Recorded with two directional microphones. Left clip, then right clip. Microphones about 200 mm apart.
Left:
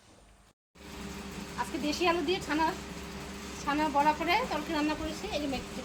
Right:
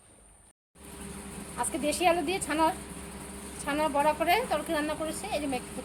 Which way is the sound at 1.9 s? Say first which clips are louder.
Right 3 dB; 50° right (ahead or behind).